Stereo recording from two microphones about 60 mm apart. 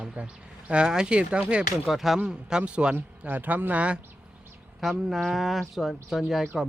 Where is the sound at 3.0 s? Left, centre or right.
Right.